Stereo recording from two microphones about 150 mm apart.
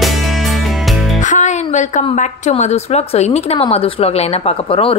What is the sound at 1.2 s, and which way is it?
A woman's voice, 55° left (ahead or behind).